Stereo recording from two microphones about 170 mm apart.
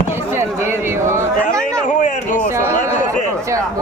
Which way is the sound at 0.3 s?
15° right (ahead or behind).